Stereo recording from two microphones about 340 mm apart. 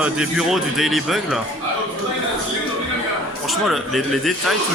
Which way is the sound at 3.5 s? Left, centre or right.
Centre.